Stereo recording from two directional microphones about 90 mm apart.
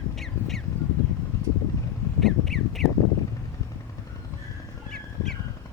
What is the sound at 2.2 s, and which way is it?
Crow, centre (ahead or behind).